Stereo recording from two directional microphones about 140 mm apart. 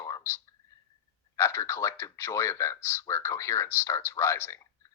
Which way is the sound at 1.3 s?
20° left (ahead or behind).